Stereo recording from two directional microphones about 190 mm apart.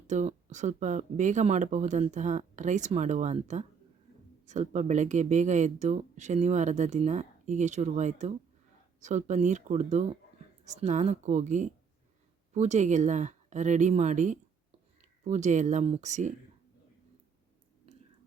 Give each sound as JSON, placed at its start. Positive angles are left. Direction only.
{"t": 0.1, "sound": "speech", "side_deg": -40}